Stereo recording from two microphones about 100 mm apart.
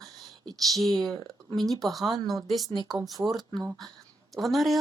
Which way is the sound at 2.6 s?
40° right (ahead or behind).